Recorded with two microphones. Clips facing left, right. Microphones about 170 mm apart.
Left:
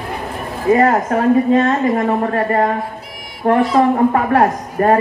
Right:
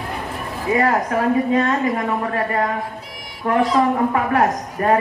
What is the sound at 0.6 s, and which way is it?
A woman's voice, 45° left (ahead or behind).